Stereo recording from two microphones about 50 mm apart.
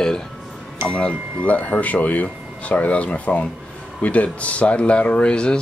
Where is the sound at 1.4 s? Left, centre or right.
Left.